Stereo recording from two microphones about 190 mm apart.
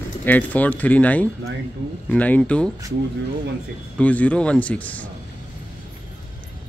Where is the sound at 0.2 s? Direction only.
10° left (ahead or behind).